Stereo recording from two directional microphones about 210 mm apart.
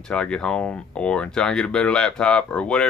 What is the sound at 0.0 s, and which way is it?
Speech, 5° left (ahead or behind).